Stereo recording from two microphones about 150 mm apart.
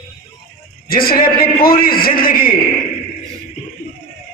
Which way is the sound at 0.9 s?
80° left.